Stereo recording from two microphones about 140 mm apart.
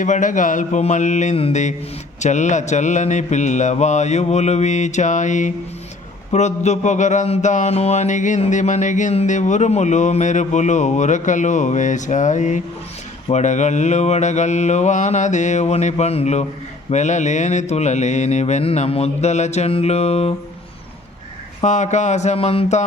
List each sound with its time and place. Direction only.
0.0 s music: 65° left (ahead or behind)
1.4 s mantra: 45° left (ahead or behind)
2.2 s music: 60° left (ahead or behind)
16.9 s mantra: 55° left (ahead or behind)
21.6 s music: 55° left (ahead or behind)